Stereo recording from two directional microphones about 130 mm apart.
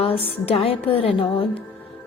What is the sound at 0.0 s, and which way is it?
A woman's voice, 45° left (ahead or behind).